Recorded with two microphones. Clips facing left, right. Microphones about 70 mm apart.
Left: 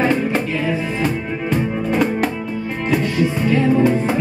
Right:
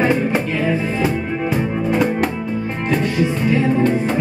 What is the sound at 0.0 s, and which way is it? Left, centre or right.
Music, centre.